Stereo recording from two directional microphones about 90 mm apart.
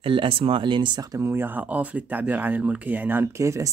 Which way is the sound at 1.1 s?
30° right (ahead or behind).